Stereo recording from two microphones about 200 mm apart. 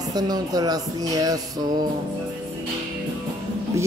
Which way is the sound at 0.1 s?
20° right (ahead or behind).